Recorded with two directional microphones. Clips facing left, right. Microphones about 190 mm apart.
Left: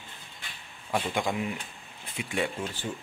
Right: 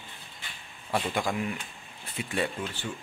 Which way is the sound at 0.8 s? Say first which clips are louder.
Even; centre (ahead or behind).